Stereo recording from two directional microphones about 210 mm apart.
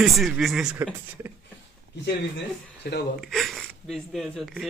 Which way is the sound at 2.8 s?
50° left (ahead or behind).